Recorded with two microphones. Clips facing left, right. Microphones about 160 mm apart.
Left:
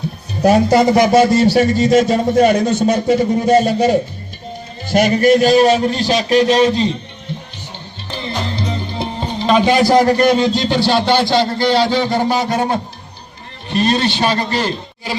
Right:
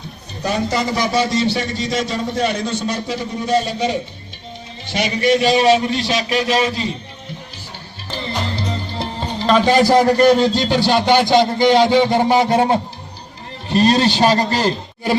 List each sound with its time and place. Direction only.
0.4 s a man's voice: 55° left (ahead or behind)
5.7 s speech: 35° left (ahead or behind)
8.1 s music: centre (ahead or behind)
10.6 s a man's voice: 10° right (ahead or behind); by 15.1 s 40° right (ahead or behind)